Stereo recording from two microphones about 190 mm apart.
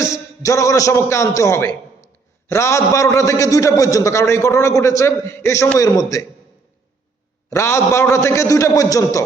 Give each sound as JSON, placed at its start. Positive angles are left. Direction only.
{"t": 0.0, "sound": "a man's voice", "side_deg": 15}
{"t": 7.5, "sound": "a man's voice", "side_deg": 15}